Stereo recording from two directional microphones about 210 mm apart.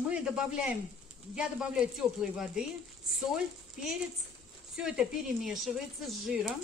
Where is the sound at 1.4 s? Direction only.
5° right (ahead or behind).